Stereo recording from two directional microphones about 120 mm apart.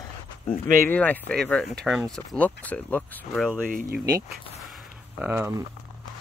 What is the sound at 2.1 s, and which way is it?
Speech, 10° left (ahead or behind).